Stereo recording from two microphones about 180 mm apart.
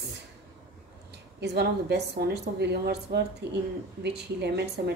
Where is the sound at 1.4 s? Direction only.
65° right (ahead or behind).